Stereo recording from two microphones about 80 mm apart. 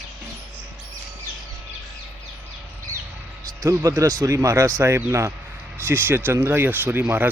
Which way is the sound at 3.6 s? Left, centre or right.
Right.